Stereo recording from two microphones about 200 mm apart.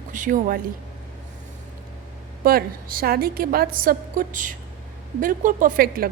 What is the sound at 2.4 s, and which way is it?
A woman's voice, 45° right (ahead or behind).